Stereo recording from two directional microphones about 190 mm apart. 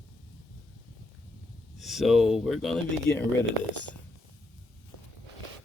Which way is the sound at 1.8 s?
Centre (ahead or behind).